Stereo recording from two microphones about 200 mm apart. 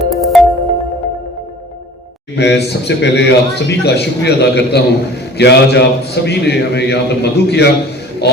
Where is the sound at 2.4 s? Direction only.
60° left (ahead or behind).